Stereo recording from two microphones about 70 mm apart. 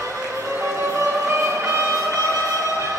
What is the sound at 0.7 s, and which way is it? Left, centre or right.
Music, right.